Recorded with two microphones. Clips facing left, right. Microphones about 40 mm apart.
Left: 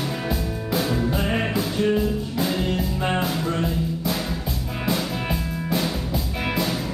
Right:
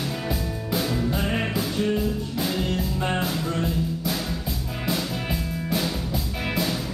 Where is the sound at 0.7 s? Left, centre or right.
Centre.